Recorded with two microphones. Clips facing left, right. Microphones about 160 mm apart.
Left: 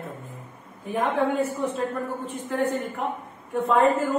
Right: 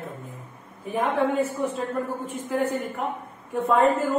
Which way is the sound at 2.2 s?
10° right (ahead or behind).